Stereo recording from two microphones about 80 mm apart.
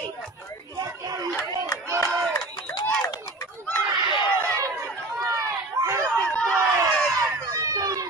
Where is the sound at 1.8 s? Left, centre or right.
Right.